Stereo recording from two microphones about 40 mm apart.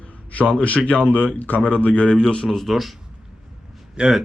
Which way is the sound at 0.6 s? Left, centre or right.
Left.